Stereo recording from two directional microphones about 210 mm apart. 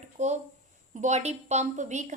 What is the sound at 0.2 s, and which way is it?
A woman's voice, 35° right (ahead or behind).